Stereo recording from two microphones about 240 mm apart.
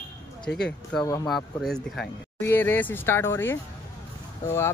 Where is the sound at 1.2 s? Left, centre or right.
Centre.